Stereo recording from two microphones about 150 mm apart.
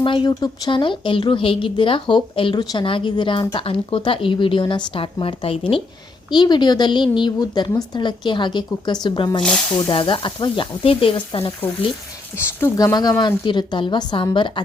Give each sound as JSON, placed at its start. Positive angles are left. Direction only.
{"t": 0.0, "sound": "speech", "side_deg": 35}
{"t": 12.5, "sound": "a woman's voice", "side_deg": 15}